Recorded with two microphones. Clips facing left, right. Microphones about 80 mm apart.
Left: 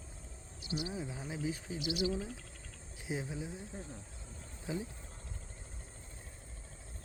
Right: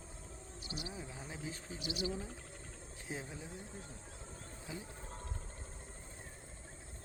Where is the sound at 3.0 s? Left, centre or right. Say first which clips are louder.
Left 6 dB; centre.